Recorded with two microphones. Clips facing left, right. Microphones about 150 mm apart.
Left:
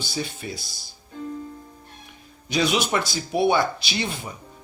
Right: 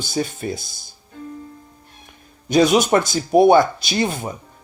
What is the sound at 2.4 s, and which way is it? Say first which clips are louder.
Speech: right 8 dB; 45° right (ahead or behind).